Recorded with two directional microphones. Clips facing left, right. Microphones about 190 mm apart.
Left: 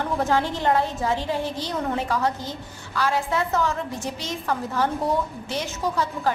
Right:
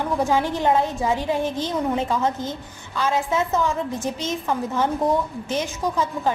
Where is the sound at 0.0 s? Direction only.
15° right (ahead or behind).